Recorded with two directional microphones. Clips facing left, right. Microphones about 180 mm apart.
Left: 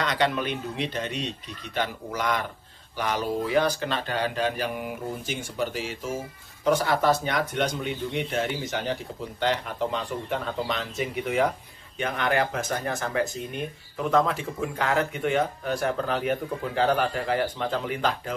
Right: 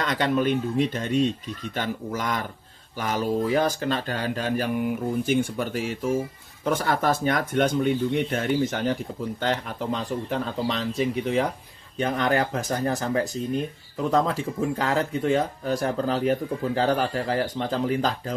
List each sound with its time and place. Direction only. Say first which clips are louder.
0.0 s speech: right 2 dB; 45° right (ahead or behind)
5.2 s speech: right 6 dB; 55° right (ahead or behind)
10.0 s speech: right 2 dB; 35° right (ahead or behind)